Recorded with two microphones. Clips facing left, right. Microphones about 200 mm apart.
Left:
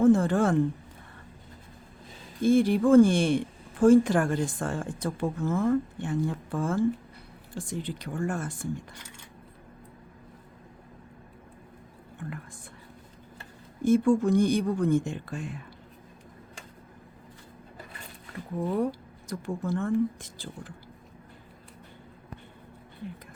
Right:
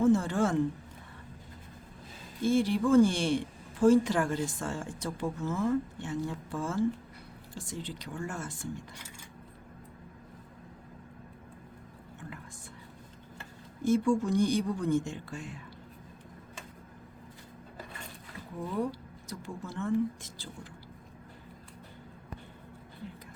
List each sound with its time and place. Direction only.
0.0 s speech: 55° left (ahead or behind)
2.4 s speech: 55° left (ahead or behind)
13.8 s speech: 55° left (ahead or behind)
18.9 s speech: 50° left (ahead or behind)